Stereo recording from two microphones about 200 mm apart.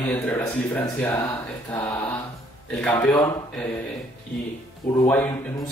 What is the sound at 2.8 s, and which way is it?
Speech, 5° left (ahead or behind).